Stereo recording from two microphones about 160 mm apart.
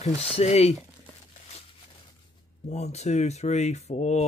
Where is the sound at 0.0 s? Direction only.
40° left (ahead or behind).